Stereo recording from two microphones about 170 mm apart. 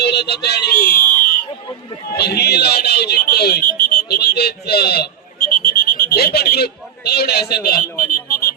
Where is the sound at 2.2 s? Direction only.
70° left (ahead or behind).